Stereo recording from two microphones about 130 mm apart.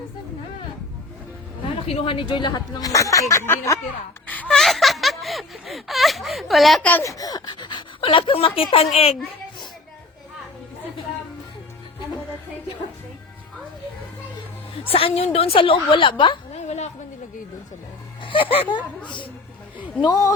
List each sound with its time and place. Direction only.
1.6 s speech: 45° left (ahead or behind); by 3.8 s 20° left (ahead or behind)
4.3 s a sound: 10° left (ahead or behind)
7.0 s speech: 25° left (ahead or behind); by 9.1 s 50° left (ahead or behind)
14.8 s a woman's voice: 45° left (ahead or behind)
16.6 s a sound: 60° left (ahead or behind)
18.2 s speech: 40° left (ahead or behind)